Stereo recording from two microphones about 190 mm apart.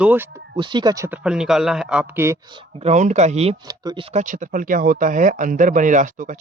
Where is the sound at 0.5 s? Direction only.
25° right (ahead or behind).